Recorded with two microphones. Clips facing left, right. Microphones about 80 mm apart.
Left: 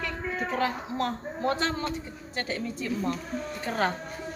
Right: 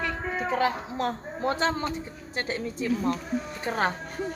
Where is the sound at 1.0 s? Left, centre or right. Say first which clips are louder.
Right 1 dB; right.